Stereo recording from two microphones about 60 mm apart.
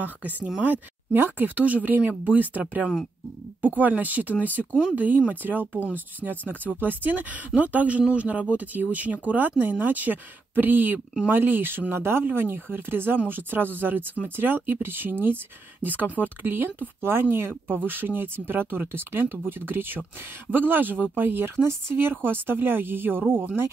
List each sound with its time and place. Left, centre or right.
0.0 s speech: right